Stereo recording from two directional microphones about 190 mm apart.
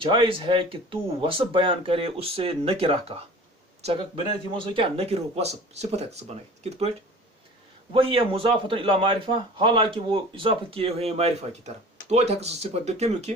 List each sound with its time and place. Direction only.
0.0 s speech: 30° right (ahead or behind)
4.5 s speech: 25° right (ahead or behind)
7.9 s speech: 30° right (ahead or behind)